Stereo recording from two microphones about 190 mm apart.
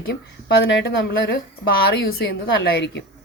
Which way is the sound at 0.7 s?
65° left (ahead or behind).